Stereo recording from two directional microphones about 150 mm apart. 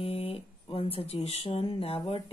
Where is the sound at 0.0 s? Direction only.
40° left (ahead or behind).